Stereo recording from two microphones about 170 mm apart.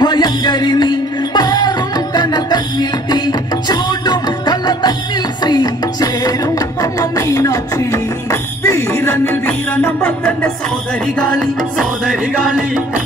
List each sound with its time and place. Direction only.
0.0 s music: 25° left (ahead or behind); by 13.0 s 5° right (ahead or behind)